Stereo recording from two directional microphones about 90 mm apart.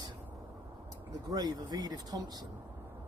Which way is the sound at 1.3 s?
50° right (ahead or behind).